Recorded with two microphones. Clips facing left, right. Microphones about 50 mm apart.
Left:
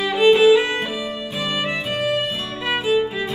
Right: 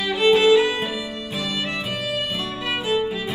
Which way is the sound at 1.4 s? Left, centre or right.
Left.